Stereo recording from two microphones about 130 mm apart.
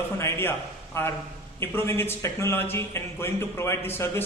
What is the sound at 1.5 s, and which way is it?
Speech, 15° left (ahead or behind).